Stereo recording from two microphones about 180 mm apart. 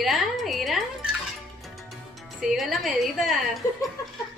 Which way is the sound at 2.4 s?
Centre (ahead or behind).